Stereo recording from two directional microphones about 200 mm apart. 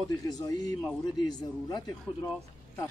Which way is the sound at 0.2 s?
20° left (ahead or behind).